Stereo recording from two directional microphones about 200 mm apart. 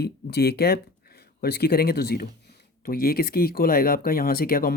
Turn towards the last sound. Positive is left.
turn(degrees=50)  # may be behind; listen again after turning